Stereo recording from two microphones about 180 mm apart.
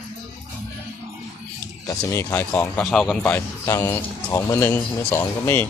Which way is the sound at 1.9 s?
15° left (ahead or behind).